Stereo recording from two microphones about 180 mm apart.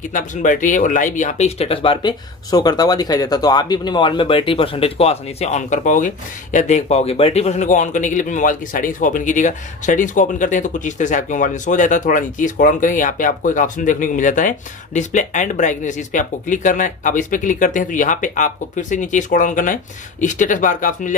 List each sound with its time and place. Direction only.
0.1 s speech: 45° left (ahead or behind)